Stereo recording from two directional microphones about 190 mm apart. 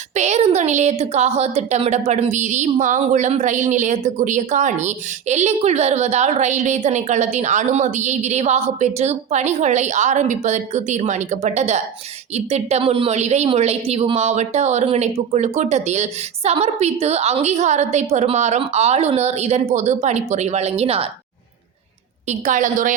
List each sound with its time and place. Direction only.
0.1 s a woman's voice: 35° right (ahead or behind)
22.3 s a woman's voice: 40° right (ahead or behind)